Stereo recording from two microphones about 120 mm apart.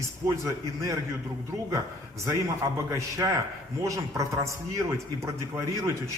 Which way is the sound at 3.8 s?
25° right (ahead or behind).